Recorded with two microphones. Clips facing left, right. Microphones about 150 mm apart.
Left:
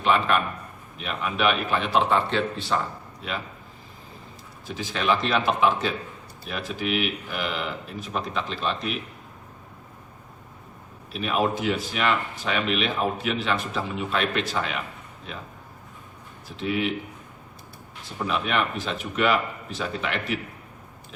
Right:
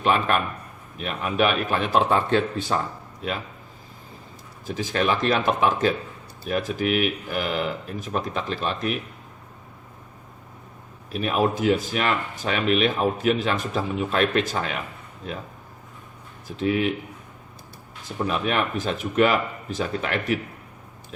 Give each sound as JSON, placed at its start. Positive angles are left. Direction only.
{"t": 0.0, "sound": "speech", "side_deg": -45}
{"t": 4.6, "sound": "speech", "side_deg": -45}
{"t": 11.1, "sound": "speech", "side_deg": -45}
{"t": 16.5, "sound": "speech", "side_deg": -45}
{"t": 18.3, "sound": "speech", "side_deg": -45}